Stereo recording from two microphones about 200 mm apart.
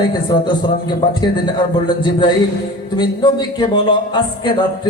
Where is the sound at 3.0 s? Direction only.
20° left (ahead or behind).